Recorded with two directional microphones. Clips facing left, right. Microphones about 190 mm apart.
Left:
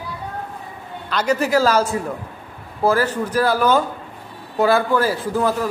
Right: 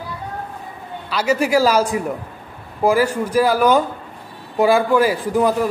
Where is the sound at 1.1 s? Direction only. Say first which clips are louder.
Right 1 dB; 10° right (ahead or behind).